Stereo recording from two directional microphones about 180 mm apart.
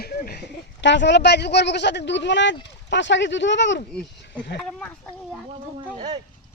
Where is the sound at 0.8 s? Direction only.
80° left.